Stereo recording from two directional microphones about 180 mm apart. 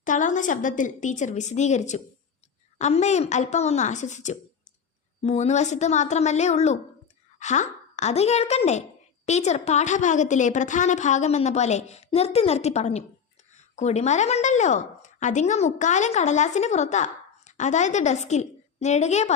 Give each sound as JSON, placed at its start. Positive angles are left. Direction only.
{"t": 0.0, "sound": "a woman's voice", "side_deg": 45}